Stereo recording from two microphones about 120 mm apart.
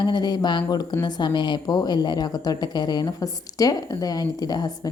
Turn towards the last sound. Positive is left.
turn(degrees=35)  # may be behind; listen again after turning